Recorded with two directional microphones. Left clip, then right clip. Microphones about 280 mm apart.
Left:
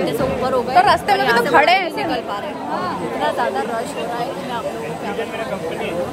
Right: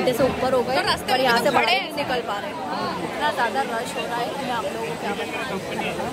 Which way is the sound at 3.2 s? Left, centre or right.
Centre.